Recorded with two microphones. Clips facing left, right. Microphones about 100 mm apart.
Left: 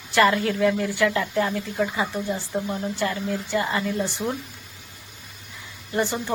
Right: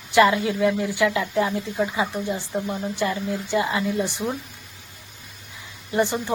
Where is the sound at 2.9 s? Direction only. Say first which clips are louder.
Right 2 dB; 15° right (ahead or behind).